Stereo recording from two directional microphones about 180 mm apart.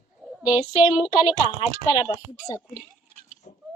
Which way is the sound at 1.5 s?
30° left (ahead or behind).